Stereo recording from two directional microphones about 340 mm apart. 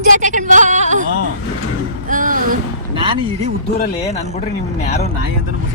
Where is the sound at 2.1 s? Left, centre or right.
Right.